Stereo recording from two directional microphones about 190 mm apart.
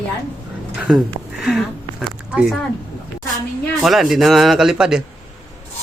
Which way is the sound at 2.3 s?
5° right (ahead or behind).